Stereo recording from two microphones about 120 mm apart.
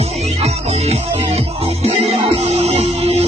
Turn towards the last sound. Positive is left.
turn(degrees=-60)  # may be behind; listen again after turning